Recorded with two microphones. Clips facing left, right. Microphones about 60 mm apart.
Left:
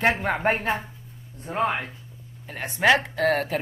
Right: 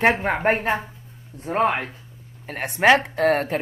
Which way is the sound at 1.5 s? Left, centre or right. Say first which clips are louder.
Right 4 dB; right.